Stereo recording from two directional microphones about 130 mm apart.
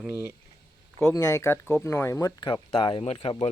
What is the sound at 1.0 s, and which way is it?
Speech, 25° left (ahead or behind).